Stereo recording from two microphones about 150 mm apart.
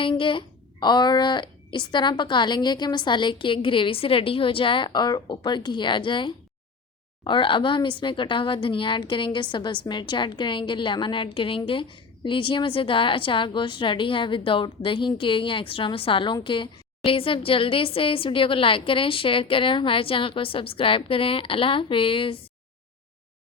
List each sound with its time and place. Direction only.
0.0 s a woman's voice: 35° left (ahead or behind)